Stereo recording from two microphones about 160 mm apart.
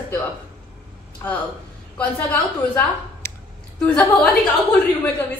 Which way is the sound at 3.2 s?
20° left (ahead or behind).